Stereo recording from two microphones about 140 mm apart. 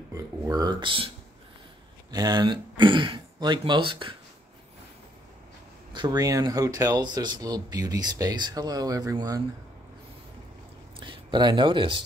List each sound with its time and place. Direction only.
0.1 s speech: 25° right (ahead or behind)
5.9 s speech: 30° right (ahead or behind)
11.0 s speech: 35° right (ahead or behind)